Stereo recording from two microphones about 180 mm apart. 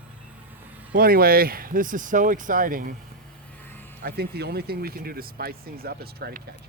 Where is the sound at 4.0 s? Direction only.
60° right (ahead or behind).